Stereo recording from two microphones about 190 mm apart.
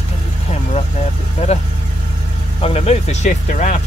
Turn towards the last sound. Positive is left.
turn(degrees=40)  # may be behind; listen again after turning